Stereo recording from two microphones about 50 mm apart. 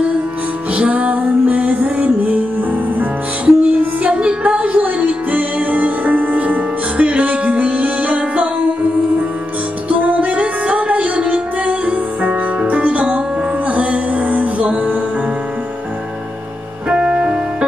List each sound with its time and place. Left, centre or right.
0.7 s music: right
9.8 s music: right
16.9 s music: right